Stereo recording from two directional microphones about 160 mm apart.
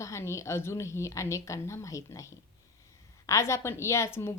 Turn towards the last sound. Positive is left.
turn(degrees=15)  # may be behind; listen again after turning